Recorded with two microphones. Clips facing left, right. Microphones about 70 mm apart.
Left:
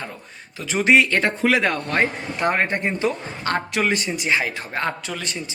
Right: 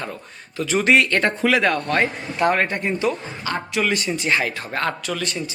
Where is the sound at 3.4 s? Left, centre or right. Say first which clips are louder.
Left 1 dB; left.